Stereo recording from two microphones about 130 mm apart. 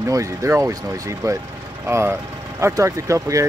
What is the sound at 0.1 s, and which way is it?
Speech, 20° right (ahead or behind).